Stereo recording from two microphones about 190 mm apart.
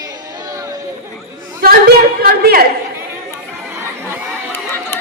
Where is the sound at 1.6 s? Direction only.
55° right (ahead or behind).